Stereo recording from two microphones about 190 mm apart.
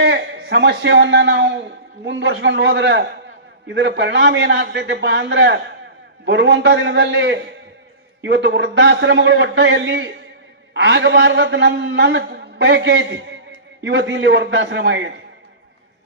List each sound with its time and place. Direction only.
0.0 s a man's voice: 65° right (ahead or behind)